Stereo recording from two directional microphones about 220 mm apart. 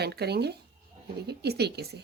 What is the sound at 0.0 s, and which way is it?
A woman's voice, 45° right (ahead or behind).